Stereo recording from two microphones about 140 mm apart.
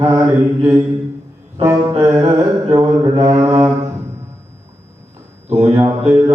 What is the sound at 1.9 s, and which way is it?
Mantra, 25° right (ahead or behind).